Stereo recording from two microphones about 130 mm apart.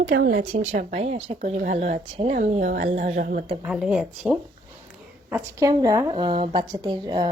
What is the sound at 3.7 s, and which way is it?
Speech, 5° right (ahead or behind).